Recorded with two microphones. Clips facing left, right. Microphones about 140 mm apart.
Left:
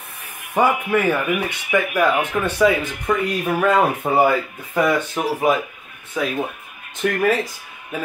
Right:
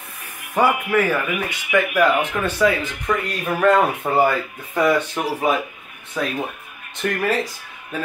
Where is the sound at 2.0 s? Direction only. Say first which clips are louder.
Even; 15° left (ahead or behind).